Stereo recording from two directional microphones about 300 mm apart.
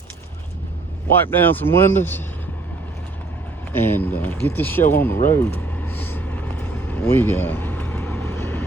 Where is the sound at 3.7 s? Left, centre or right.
Centre.